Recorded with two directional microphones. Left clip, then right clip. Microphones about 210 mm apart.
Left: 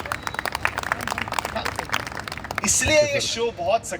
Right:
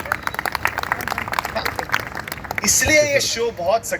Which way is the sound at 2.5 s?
55° left (ahead or behind).